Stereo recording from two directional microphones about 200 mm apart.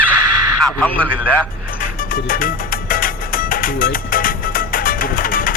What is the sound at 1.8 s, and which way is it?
Music, 45° left (ahead or behind).